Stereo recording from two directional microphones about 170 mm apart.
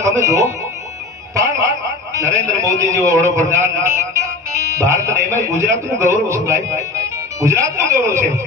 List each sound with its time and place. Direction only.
0.0 s speech: 20° right (ahead or behind)
1.3 s a sound: 20° right (ahead or behind)
2.1 s a man's voice: 20° right (ahead or behind)